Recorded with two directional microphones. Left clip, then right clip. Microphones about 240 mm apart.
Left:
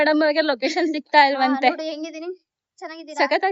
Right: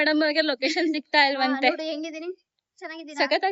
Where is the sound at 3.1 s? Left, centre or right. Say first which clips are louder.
Left 3 dB; left.